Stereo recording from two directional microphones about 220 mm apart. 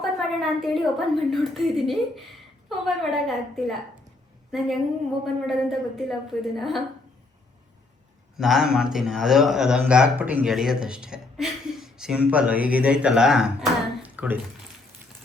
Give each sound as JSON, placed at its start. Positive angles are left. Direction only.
{"t": 0.0, "sound": "a woman's voice", "side_deg": 0}
{"t": 8.4, "sound": "a man's voice", "side_deg": 0}